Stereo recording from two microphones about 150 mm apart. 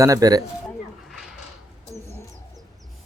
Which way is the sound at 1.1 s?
Centre (ahead or behind).